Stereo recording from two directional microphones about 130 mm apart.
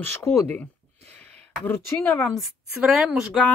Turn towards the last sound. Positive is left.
turn(degrees=-5)  # may be behind; listen again after turning